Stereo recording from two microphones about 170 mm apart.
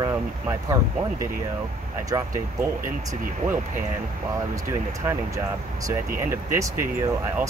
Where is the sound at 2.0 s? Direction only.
20° right (ahead or behind).